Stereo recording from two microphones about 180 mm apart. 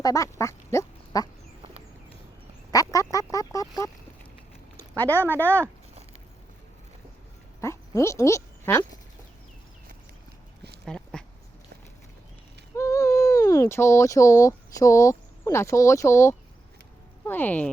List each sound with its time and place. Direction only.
0.0 s quack: 20° left (ahead or behind)
2.9 s fowl: 20° left (ahead or behind)
4.8 s speech: 10° left (ahead or behind)
7.6 s a sound: 15° left (ahead or behind)
10.8 s dog: 5° left (ahead or behind)
12.7 s speech: 15° left (ahead or behind)